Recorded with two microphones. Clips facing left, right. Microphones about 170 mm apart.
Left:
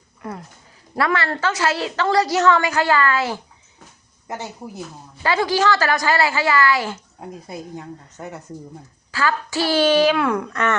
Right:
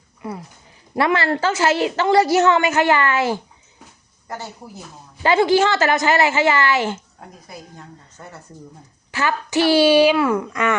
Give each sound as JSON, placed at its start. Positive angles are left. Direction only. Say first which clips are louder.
{"t": 0.2, "sound": "speech", "louder": "right 2 dB", "side_deg": -5}
{"t": 0.9, "sound": "a woman's voice", "louder": "right 3 dB", "side_deg": -25}
{"t": 5.2, "sound": "a woman's voice", "louder": "right 4 dB", "side_deg": -25}
{"t": 7.2, "sound": "speech", "louder": "left 6 dB", "side_deg": 15}
{"t": 9.1, "sound": "speech", "louder": "right 2 dB", "side_deg": -20}